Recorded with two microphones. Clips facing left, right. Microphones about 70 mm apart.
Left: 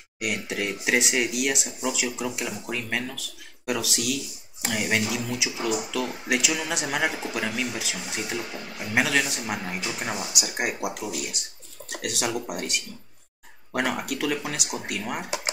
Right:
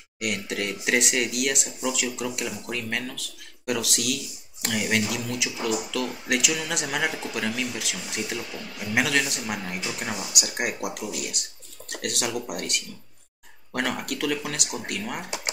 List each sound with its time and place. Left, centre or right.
0.2 s speech: centre
8.4 s speech: left
8.9 s speech: centre